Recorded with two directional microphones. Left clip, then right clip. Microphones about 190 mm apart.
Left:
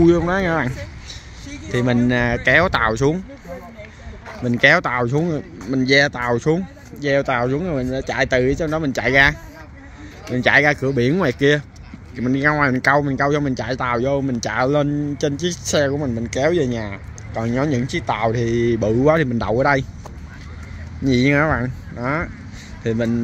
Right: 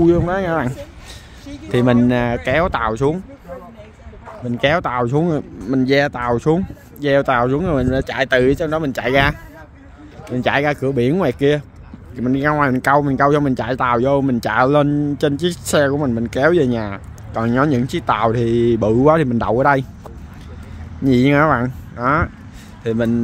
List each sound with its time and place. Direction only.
0.0 s speech: 5° right (ahead or behind)
1.7 s speech: 25° right (ahead or behind)
4.3 s speech: centre (ahead or behind); by 19.9 s 15° right (ahead or behind)
21.0 s speech: 20° right (ahead or behind)